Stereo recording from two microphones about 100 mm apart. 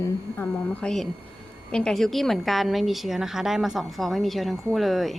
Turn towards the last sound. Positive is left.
turn(degrees=0)  # may be behind; listen again after turning